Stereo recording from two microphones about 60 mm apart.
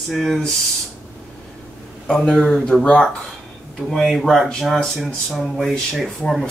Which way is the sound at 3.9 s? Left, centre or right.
Centre.